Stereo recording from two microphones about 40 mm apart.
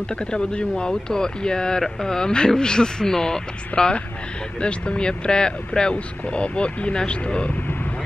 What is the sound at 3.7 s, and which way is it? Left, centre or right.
Speech, left.